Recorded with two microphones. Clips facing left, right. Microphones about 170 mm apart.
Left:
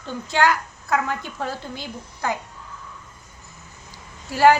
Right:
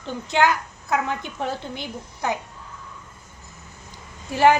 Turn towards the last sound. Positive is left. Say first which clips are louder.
# left 1 dB
turn(degrees=-20)  # may be behind; listen again after turning